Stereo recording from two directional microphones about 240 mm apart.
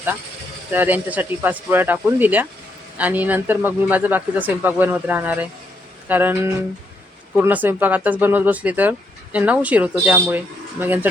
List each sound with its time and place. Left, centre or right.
0.7 s speech: centre